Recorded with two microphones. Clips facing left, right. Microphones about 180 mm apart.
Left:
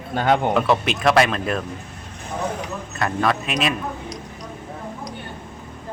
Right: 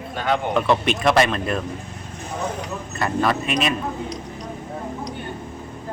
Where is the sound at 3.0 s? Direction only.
Centre (ahead or behind).